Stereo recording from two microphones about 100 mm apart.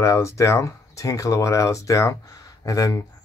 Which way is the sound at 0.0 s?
30° left (ahead or behind).